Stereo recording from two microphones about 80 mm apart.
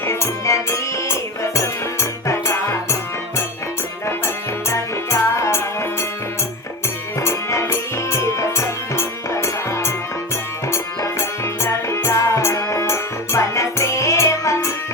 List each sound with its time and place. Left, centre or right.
0.0 s music: left
4.7 s music: left
7.2 s music: left